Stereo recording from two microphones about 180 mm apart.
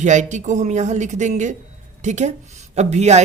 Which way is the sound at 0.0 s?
40° right (ahead or behind).